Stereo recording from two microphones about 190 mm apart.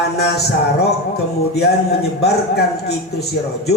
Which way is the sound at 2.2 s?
60° left (ahead or behind).